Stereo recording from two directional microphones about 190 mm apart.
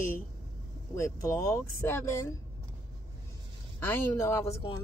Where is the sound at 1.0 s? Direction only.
15° left (ahead or behind).